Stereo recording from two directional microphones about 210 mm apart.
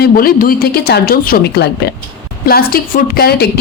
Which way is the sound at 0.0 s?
45° left (ahead or behind).